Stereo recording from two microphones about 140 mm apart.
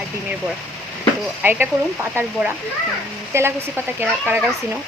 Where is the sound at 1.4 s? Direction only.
15° right (ahead or behind).